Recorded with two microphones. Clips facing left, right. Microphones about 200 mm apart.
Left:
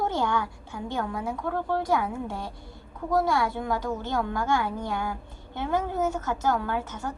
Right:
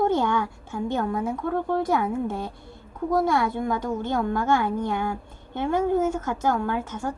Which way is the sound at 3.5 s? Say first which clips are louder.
Right 3 dB; 50° right (ahead or behind).